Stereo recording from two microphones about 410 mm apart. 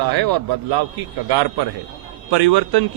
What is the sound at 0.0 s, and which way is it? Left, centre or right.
Speech, right.